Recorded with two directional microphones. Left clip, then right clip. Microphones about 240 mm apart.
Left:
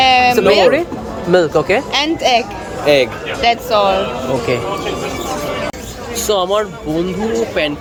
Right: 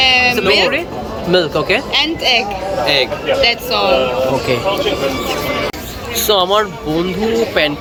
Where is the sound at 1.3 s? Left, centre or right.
Centre.